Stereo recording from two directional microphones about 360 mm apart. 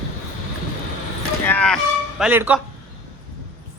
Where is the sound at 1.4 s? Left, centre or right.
Centre.